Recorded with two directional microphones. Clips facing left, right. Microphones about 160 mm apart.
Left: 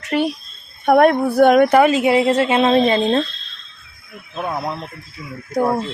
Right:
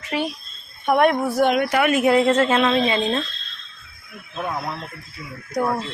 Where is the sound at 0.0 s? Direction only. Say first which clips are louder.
Left 6 dB; 60° left (ahead or behind).